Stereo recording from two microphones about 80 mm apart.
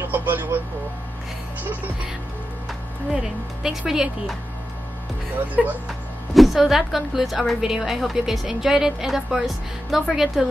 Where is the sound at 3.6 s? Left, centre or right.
Centre.